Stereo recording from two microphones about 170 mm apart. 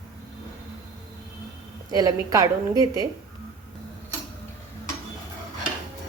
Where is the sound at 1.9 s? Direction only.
20° right (ahead or behind).